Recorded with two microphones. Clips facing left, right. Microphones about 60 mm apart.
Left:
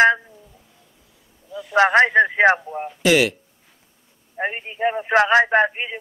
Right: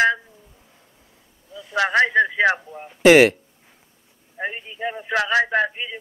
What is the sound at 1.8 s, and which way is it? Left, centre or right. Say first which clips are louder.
Speech: left 3 dB; left.